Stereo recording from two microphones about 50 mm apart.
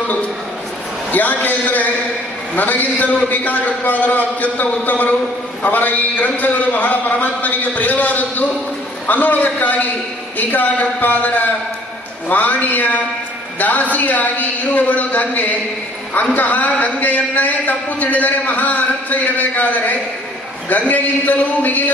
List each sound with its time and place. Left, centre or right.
1.1 s a man's voice: left